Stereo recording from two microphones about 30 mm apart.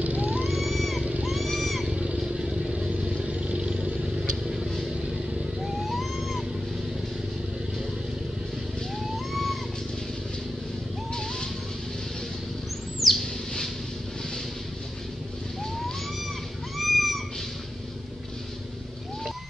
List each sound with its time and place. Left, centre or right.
0.0 s vehicle: right
0.5 s vehicle: centre
2.1 s vehicle: right
2.7 s vehicle: right
5.6 s vehicle: centre
9.1 s a sound: centre
13.0 s owl: centre
16.7 s cat: centre